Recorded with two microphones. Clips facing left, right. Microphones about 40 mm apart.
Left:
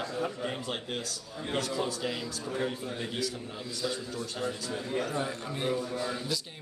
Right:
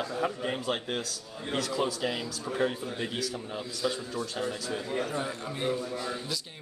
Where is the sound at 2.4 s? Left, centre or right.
Centre.